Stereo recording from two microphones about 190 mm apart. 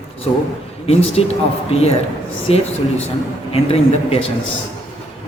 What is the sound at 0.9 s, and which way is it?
Speech, 35° left (ahead or behind).